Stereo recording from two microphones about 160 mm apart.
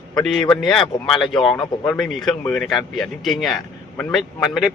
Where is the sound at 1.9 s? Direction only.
Centre (ahead or behind).